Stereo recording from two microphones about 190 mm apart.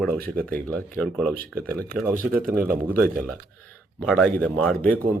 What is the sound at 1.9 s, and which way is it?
Speech, 50° right (ahead or behind).